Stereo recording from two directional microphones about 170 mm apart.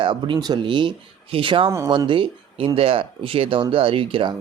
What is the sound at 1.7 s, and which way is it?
Speech, 20° right (ahead or behind).